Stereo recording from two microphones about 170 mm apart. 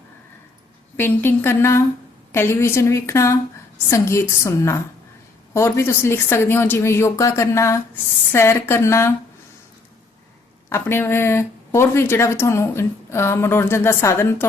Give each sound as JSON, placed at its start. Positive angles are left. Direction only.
{"t": 0.9, "sound": "speech", "side_deg": 10}
{"t": 10.7, "sound": "speech", "side_deg": 15}